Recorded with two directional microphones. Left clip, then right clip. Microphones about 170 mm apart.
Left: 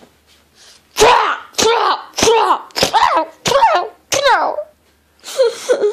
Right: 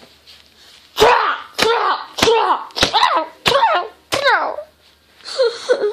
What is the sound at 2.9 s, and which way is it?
Slap, 15° left (ahead or behind).